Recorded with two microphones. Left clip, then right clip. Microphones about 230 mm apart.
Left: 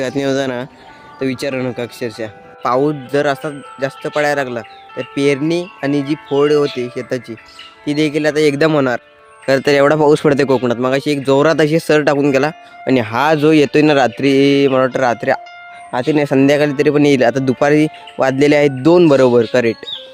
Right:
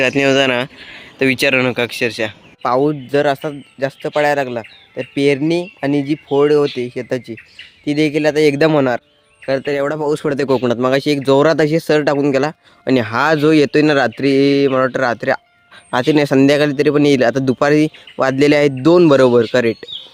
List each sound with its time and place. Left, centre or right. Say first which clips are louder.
0.0 s speech: right 4 dB; centre
9.5 s speech: left 6 dB; left
10.5 s speech: even; centre